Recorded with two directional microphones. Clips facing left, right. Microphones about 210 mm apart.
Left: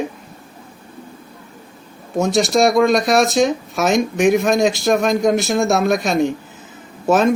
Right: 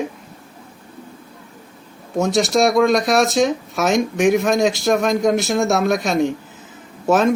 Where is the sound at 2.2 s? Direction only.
15° left (ahead or behind).